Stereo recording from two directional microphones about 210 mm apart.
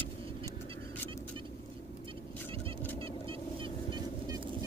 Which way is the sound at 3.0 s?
25° right (ahead or behind).